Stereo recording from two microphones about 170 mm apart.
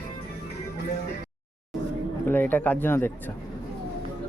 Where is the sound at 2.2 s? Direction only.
10° left (ahead or behind).